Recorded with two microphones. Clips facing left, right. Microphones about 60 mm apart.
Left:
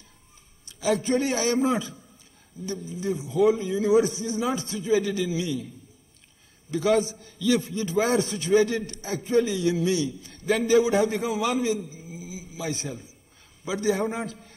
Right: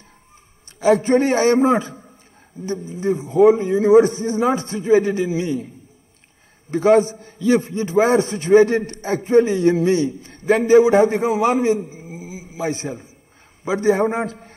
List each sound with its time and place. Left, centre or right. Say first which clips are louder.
0.7 s a man's voice: right 9 dB; right
6.7 s a man's voice: right 8 dB; right